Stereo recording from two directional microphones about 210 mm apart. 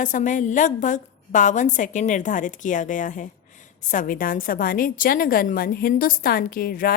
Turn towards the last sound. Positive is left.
turn(degrees=45)  # may be behind; listen again after turning